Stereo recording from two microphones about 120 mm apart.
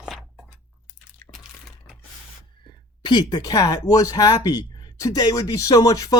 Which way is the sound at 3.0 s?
40° left (ahead or behind).